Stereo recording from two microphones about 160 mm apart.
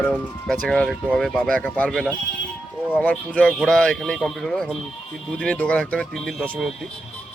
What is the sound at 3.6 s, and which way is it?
Speech, 5° left (ahead or behind).